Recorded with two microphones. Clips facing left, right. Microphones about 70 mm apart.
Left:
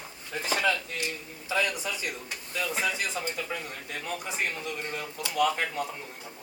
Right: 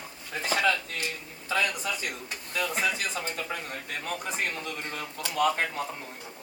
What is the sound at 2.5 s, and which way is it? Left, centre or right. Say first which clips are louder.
Speech: right 1 dB; right.